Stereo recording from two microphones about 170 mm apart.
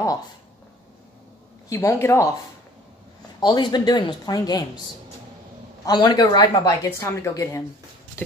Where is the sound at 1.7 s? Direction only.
15° left (ahead or behind).